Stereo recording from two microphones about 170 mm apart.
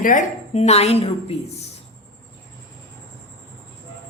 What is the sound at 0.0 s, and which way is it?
A woman's voice, 50° left (ahead or behind).